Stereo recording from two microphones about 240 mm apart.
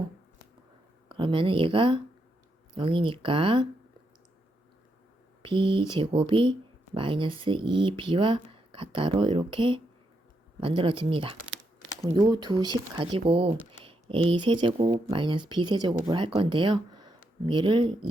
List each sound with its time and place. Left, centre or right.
1.0 s speech: right
5.4 s speech: right